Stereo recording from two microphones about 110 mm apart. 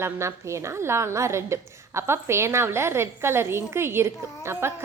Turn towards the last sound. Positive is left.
turn(degrees=-25)  # may be behind; listen again after turning